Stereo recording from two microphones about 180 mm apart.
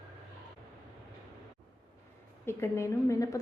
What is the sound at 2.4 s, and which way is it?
Speech, 15° left (ahead or behind).